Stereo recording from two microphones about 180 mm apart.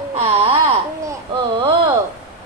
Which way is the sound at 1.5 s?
25° right (ahead or behind).